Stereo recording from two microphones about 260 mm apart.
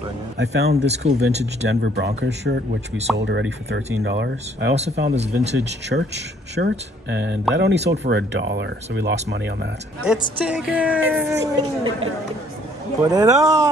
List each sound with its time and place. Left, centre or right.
0.4 s speech: right
0.7 s speech: right
1.4 s speech: right
5.0 s speech: right
5.5 s speech: right
10.4 s a woman's voice: centre
13.1 s a woman's voice: centre